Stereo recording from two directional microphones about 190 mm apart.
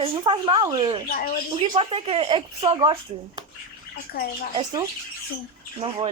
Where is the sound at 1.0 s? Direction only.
50° left (ahead or behind).